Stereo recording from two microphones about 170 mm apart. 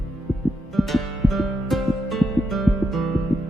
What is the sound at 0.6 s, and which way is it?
Music, centre (ahead or behind).